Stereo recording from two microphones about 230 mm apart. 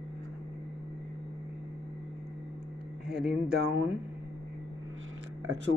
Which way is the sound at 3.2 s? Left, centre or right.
Centre.